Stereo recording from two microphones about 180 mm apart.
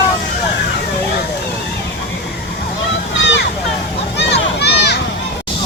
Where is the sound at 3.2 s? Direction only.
75° left (ahead or behind).